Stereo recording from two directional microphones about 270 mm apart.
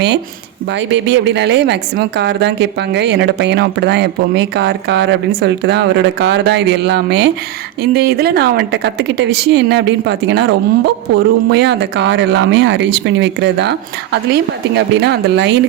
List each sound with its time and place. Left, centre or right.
0.7 s a woman's voice: right